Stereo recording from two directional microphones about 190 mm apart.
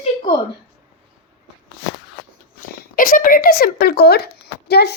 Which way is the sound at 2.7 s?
50° left (ahead or behind).